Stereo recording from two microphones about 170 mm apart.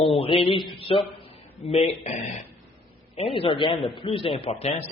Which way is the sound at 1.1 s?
35° left (ahead or behind).